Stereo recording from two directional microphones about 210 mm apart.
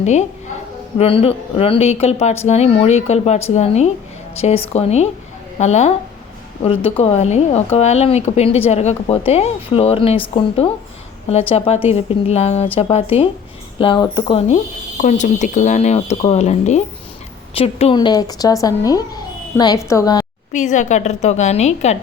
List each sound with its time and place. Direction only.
0.0 s speech: 35° left (ahead or behind); by 20.2 s 15° left (ahead or behind)
20.5 s speech: 35° left (ahead or behind)